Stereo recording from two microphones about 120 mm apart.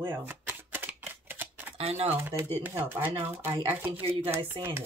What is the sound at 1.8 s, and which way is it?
Speech, 55° right (ahead or behind).